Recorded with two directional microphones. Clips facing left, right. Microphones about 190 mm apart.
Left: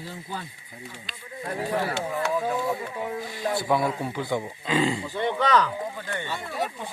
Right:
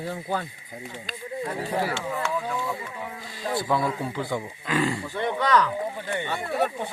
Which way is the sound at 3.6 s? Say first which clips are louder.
Left 1 dB; 15° left (ahead or behind).